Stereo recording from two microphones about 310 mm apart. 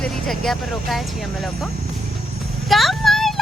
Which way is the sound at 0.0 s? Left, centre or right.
Centre.